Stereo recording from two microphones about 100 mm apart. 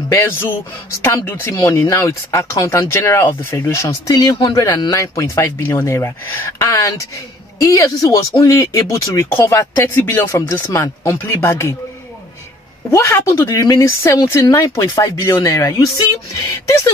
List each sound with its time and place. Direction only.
0.1 s speech: 25° left (ahead or behind)
4.1 s speech: 45° left (ahead or behind)
4.9 s speech: 30° left (ahead or behind)
12.9 s speech: 30° left (ahead or behind)